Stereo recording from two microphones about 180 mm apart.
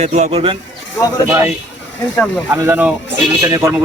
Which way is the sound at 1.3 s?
15° right (ahead or behind).